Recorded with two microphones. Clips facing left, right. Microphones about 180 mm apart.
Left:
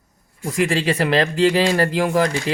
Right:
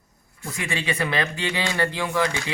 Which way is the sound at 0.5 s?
90° left.